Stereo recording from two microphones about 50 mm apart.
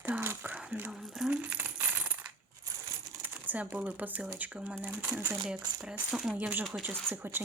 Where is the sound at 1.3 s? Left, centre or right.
Right.